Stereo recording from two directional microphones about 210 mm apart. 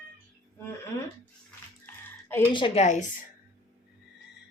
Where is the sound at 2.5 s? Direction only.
25° left (ahead or behind).